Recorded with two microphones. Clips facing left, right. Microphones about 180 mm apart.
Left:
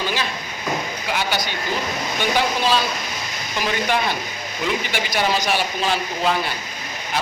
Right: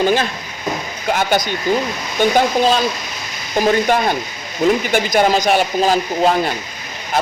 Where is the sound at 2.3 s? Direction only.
45° right (ahead or behind).